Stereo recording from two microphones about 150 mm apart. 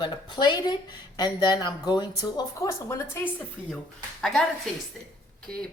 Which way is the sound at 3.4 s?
5° left (ahead or behind).